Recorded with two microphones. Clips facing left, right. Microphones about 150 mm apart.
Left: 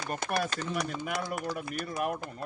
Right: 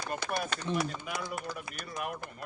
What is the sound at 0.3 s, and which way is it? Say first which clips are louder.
Speech: left 4 dB; 90° left.